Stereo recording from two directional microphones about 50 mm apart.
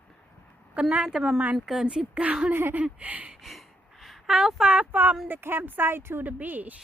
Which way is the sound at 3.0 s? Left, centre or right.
Right.